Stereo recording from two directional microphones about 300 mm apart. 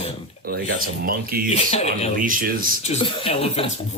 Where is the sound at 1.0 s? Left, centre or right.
Right.